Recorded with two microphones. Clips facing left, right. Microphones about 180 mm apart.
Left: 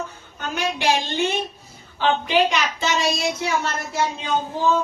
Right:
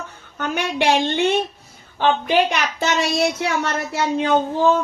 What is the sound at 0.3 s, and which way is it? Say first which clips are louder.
A woman's voice: right 4 dB; 60° right (ahead or behind).